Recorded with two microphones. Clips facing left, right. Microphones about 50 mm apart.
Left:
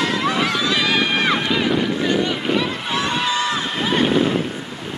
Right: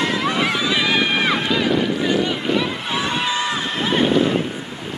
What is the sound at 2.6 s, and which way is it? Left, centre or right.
Run, centre.